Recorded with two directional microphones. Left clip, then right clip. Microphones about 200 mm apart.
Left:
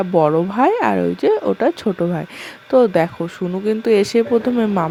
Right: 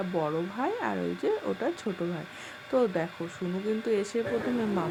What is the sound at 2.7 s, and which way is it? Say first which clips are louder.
Speech: left 14 dB; 40° left (ahead or behind).